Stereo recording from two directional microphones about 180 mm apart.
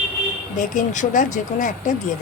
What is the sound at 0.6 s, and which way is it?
Speech, 45° left (ahead or behind).